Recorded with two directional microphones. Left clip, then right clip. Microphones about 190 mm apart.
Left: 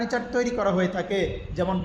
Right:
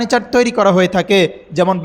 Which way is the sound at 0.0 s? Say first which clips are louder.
Right 12 dB; 40° right (ahead or behind).